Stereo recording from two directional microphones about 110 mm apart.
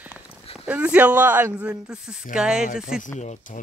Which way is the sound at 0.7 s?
10° right (ahead or behind).